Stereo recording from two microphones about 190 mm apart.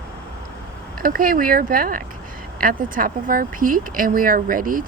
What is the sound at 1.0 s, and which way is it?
Speech, 50° right (ahead or behind).